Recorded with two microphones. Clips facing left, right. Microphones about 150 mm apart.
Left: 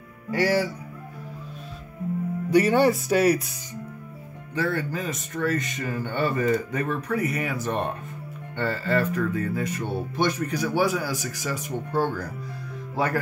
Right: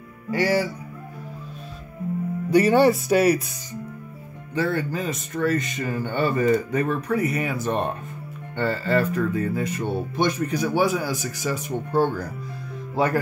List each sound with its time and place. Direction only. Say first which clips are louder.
0.3 s speech: right 1 dB; centre (ahead or behind)
2.5 s speech: right 2 dB; 30° right (ahead or behind)
3.1 s speech: right 2 dB; 5° right (ahead or behind)
4.6 s speech: right 2 dB; 25° right (ahead or behind)